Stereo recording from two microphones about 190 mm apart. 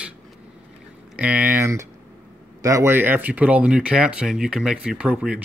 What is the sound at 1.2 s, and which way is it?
Speech, 10° right (ahead or behind).